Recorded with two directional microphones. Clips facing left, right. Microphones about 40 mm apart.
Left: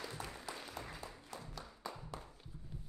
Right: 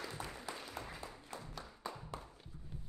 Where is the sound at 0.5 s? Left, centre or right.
Right.